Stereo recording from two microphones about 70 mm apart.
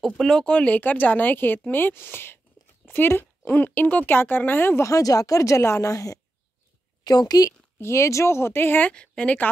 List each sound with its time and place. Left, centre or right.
0.0 s speech: centre
0.5 s speech: centre
4.8 s speech: left
7.1 s a woman's voice: left
7.8 s speech: left
8.9 s speech: centre